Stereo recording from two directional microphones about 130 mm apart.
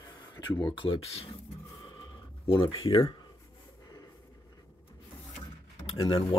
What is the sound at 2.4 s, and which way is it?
Speech, 40° left (ahead or behind).